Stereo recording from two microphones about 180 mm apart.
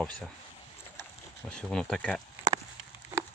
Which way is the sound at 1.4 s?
5° left (ahead or behind).